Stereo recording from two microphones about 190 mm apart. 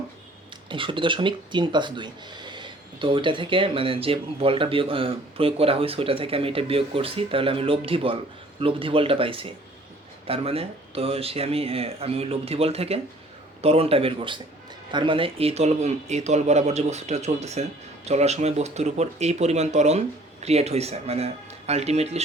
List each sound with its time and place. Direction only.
0.7 s speech: 25° right (ahead or behind)